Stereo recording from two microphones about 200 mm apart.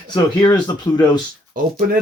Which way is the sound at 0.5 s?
20° left (ahead or behind).